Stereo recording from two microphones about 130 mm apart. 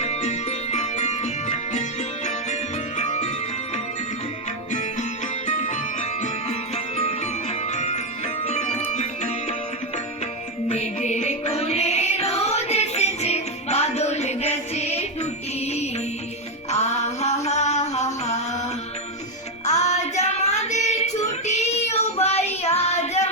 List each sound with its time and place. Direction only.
0.0 s music: 60° left (ahead or behind)
3.0 s music: 65° left (ahead or behind)
4.7 s music: 70° left (ahead or behind)
10.7 s music: 60° left (ahead or behind)
19.6 s child singing: 60° left (ahead or behind)